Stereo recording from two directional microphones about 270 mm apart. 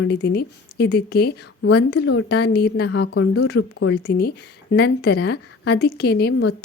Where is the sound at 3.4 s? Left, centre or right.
Left.